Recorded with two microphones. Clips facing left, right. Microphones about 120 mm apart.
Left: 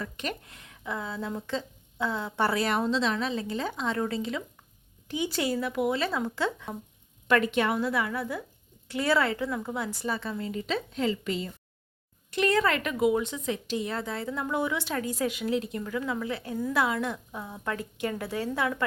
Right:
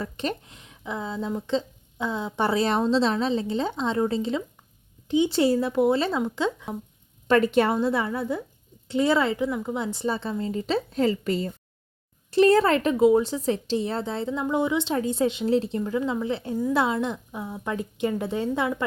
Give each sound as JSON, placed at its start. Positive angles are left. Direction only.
{"t": 0.0, "sound": "speech", "side_deg": -30}
{"t": 7.3, "sound": "speech", "side_deg": -35}